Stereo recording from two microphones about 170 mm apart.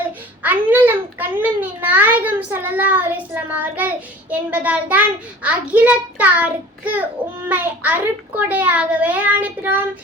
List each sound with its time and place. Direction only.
0.4 s child singing: 10° right (ahead or behind)